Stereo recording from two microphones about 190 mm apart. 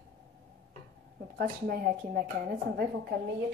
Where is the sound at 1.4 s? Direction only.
50° right (ahead or behind).